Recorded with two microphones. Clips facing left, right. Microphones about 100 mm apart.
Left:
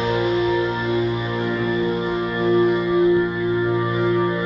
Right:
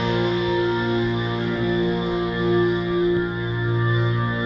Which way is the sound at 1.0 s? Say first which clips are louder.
Left 1 dB; 45° left (ahead or behind).